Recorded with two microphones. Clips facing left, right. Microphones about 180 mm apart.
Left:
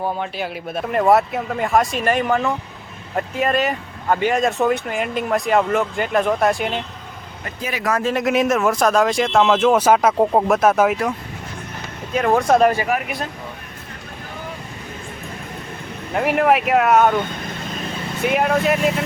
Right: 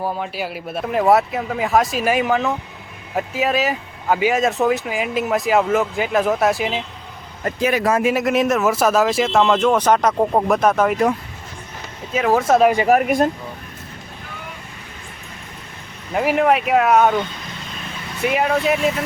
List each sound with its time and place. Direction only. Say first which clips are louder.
0.0 s speech: even; 5° right (ahead or behind)
8.0 s speech: right 1 dB; 5° right (ahead or behind)
12.1 s speech: even; 5° right (ahead or behind)
12.9 s speech: right 8 dB; 45° right (ahead or behind)
16.1 s speech: even; centre (ahead or behind)
18.2 s speech: even; centre (ahead or behind)